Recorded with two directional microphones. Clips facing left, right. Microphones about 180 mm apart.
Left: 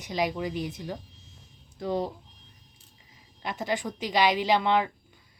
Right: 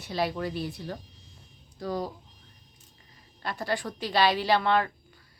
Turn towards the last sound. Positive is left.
turn(degrees=15)  # may be behind; listen again after turning